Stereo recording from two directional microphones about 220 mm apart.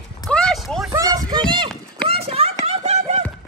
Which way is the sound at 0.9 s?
15° right (ahead or behind).